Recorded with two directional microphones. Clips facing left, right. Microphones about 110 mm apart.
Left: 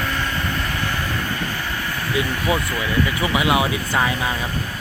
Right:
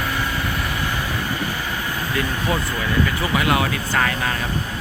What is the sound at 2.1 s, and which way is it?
Speech, 15° left (ahead or behind).